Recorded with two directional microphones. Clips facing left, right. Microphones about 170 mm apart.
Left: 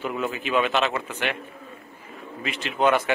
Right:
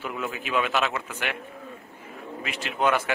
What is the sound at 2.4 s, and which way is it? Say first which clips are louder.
Speech: left 3 dB; 5° right (ahead or behind).